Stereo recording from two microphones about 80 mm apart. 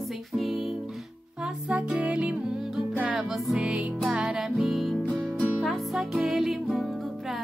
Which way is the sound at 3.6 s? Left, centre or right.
Centre.